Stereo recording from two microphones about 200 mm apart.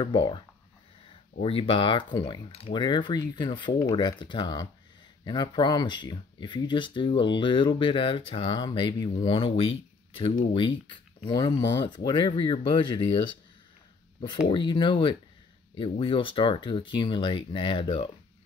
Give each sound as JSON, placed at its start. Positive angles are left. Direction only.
{"t": 0.0, "sound": "speech", "side_deg": 25}
{"t": 14.5, "sound": "speech", "side_deg": 25}